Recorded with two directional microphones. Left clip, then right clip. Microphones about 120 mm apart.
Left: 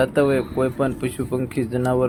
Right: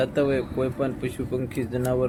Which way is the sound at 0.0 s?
30° left (ahead or behind).